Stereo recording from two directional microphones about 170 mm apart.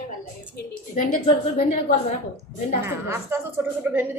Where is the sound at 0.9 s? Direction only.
50° left (ahead or behind).